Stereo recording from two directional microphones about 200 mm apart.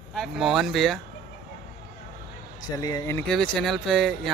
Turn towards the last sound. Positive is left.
turn(degrees=0)  # may be behind; listen again after turning